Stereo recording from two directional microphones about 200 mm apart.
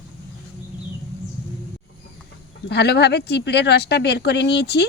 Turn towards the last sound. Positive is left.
turn(degrees=55)  # may be behind; listen again after turning